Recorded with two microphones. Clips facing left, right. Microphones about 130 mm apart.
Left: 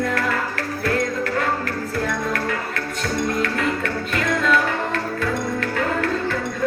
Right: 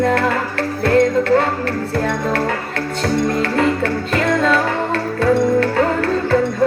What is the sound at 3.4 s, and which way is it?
Music, 30° right (ahead or behind).